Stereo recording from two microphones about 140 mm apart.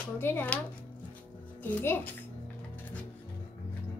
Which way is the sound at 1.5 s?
10° left (ahead or behind).